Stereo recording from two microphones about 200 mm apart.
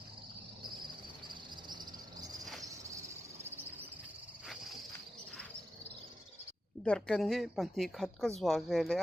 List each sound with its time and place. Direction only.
1.3 s cricket: 20° right (ahead or behind)
6.8 s a woman's voice: 5° left (ahead or behind)